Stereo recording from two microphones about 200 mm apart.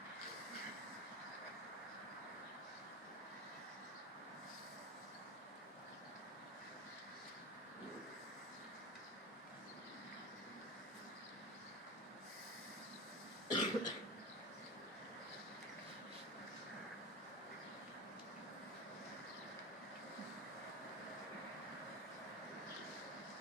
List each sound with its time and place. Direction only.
13.5 s cough: 20° left (ahead or behind)